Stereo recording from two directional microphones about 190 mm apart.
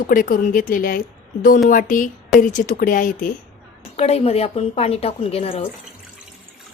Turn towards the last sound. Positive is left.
turn(degrees=30)  # may be behind; listen again after turning